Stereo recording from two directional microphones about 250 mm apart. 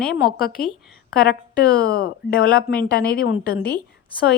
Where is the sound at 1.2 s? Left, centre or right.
Left.